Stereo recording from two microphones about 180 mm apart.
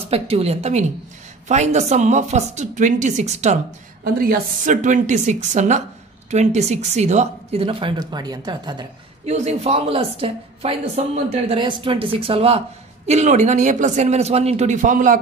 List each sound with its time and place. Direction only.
0.1 s a woman's voice: 35° right (ahead or behind)
4.0 s a woman's voice: 55° right (ahead or behind); by 8.8 s 25° right (ahead or behind)
9.2 s a woman's voice: 40° right (ahead or behind)